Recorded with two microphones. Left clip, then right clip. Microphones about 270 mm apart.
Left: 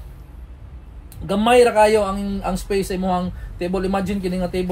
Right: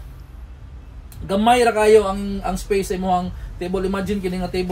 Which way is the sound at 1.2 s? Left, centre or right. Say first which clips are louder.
Left 1 dB; centre.